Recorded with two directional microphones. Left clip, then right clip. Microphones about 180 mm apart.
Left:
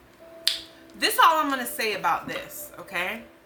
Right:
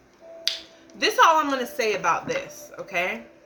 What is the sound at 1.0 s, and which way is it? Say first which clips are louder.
Speech: right 2 dB; 15° left (ahead or behind).